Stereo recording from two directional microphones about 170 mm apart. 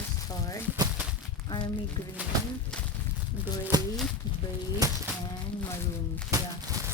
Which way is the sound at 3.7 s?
25° right (ahead or behind).